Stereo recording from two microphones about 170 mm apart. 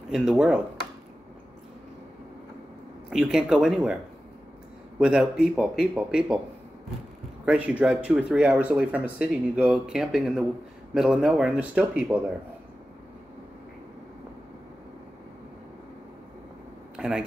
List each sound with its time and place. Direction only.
0.1 s speech: 5° right (ahead or behind)
3.1 s speech: 5° right (ahead or behind)
7.4 s speech: 10° right (ahead or behind)
16.9 s a sound: 5° right (ahead or behind)